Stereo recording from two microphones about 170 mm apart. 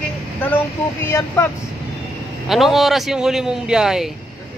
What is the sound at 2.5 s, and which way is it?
Speech, centre (ahead or behind).